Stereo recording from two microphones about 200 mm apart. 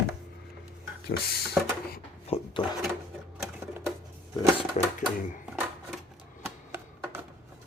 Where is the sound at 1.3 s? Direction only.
50° left (ahead or behind).